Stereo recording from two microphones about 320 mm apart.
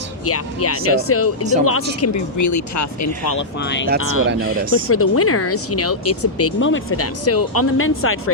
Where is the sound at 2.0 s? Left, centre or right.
Left.